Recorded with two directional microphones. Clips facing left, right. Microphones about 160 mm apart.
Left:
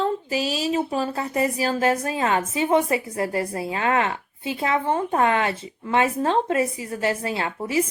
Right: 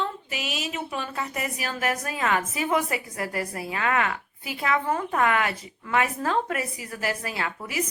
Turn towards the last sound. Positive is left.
turn(degrees=30)  # may be behind; listen again after turning